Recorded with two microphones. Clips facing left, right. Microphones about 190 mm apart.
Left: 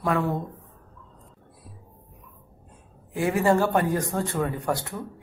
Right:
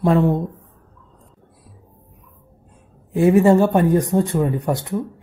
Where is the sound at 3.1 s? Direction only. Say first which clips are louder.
Right 8 dB; 20° right (ahead or behind).